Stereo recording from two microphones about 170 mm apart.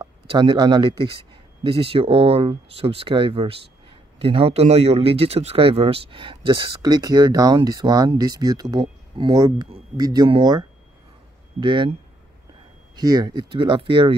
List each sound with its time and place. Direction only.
0.3 s speech: 25° right (ahead or behind)
11.6 s speech: 30° right (ahead or behind)
12.9 s speech: 25° right (ahead or behind)